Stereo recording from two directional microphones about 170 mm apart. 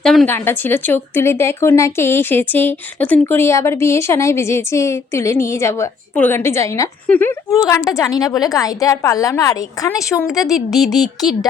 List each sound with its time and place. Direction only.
0.0 s speech: centre (ahead or behind)
0.3 s a woman's voice: 15° left (ahead or behind)
10.5 s speech: centre (ahead or behind)